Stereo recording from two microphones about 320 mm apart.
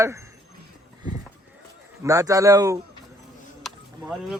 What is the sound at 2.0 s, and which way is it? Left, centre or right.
Speech, centre.